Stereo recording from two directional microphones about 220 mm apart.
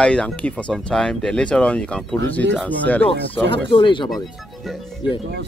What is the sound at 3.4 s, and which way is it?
Speech, 25° left (ahead or behind).